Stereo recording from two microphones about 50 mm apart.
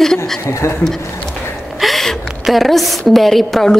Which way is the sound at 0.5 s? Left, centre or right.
Left.